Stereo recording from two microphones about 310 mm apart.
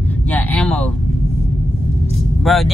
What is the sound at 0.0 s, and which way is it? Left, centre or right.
Vehicle, centre.